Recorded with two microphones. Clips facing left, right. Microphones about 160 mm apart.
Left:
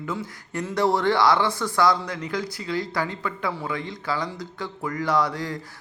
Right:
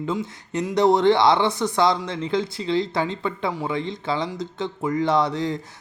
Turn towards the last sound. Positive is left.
turn(degrees=-20)  # may be behind; listen again after turning